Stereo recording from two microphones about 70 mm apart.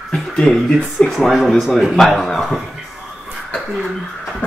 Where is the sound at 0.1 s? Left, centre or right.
Centre.